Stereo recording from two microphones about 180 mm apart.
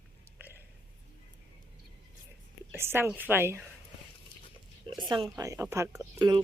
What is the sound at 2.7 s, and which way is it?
Speech, 15° right (ahead or behind).